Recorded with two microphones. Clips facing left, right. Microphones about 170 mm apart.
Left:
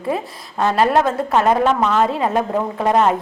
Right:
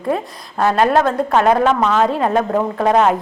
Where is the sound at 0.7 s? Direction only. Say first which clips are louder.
Right 1 dB; centre (ahead or behind).